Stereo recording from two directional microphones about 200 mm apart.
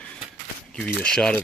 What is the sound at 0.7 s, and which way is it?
Speech, 5° left (ahead or behind).